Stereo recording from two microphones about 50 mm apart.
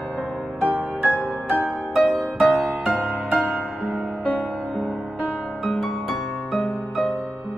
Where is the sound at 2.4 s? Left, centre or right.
Right.